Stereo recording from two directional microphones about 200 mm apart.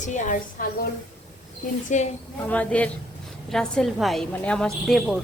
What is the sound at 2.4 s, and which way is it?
A woman's voice, 5° left (ahead or behind).